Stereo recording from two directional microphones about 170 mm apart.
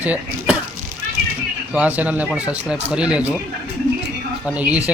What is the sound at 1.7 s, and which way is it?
Speech, 10° right (ahead or behind).